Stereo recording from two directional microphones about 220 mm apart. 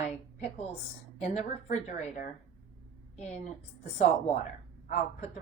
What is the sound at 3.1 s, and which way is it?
Speech, 30° left (ahead or behind).